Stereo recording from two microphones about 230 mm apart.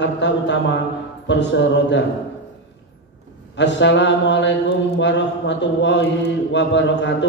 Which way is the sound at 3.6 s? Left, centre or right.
Left.